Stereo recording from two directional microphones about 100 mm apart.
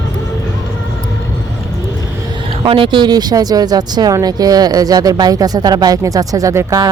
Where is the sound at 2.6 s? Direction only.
60° right (ahead or behind).